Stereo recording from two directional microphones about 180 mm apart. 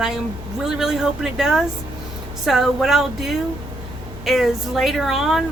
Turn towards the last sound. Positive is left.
turn(degrees=0)  # may be behind; listen again after turning